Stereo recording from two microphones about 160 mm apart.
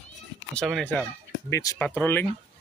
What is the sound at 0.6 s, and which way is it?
Speech, 5° left (ahead or behind).